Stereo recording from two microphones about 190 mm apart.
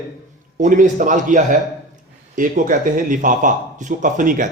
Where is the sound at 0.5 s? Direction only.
40° right (ahead or behind).